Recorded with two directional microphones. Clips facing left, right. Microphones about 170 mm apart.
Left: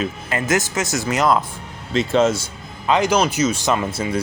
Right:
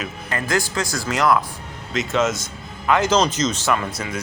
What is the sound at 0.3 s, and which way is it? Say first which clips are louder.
Speech: left 1 dB; 20° left (ahead or behind).